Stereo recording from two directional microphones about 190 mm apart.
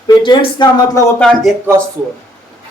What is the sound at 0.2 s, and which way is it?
Speech, 25° left (ahead or behind).